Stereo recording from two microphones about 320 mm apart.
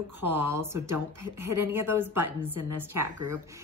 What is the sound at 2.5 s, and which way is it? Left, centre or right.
Speech, right.